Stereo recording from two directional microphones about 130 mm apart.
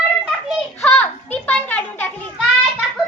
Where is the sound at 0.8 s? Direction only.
10° left (ahead or behind).